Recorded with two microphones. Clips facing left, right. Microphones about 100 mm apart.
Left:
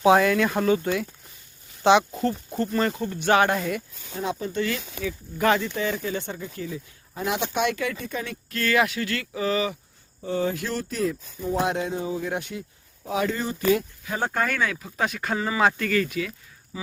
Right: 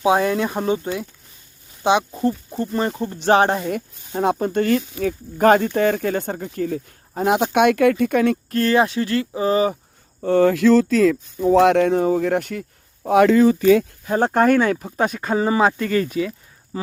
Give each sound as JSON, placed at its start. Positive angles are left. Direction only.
{"t": 0.0, "sound": "speech", "side_deg": -25}
{"t": 1.8, "sound": "speech", "side_deg": -15}
{"t": 3.0, "sound": "speech", "side_deg": -30}
{"t": 3.7, "sound": "speech", "side_deg": -50}
{"t": 10.2, "sound": "speech", "side_deg": -65}
{"t": 14.0, "sound": "speech", "side_deg": -45}
{"t": 16.7, "sound": "speech", "side_deg": -45}